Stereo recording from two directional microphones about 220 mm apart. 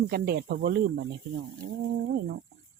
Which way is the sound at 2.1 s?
45° right (ahead or behind).